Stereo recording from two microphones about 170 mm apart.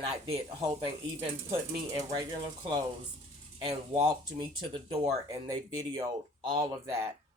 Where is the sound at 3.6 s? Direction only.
30° right (ahead or behind).